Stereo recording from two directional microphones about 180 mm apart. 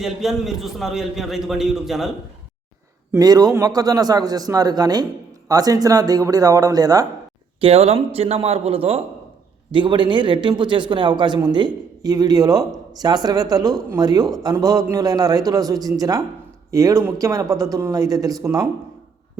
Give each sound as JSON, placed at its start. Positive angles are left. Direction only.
{"t": 0.0, "sound": "a man's voice", "side_deg": 0}
{"t": 3.1, "sound": "speech", "side_deg": -20}
{"t": 7.6, "sound": "a man's voice", "side_deg": -35}